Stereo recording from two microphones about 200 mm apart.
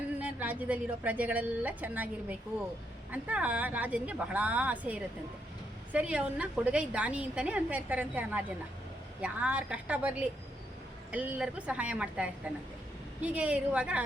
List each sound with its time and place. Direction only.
0.2 s a woman's voice: 5° right (ahead or behind)